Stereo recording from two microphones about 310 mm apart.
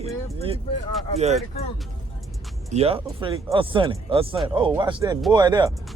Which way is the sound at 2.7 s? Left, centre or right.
Centre.